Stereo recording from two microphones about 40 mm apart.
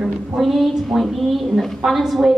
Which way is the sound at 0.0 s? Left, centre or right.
Centre.